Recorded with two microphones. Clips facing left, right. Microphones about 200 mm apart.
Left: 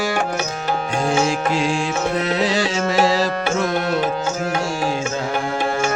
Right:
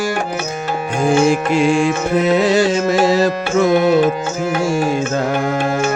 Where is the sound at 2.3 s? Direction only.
50° right (ahead or behind).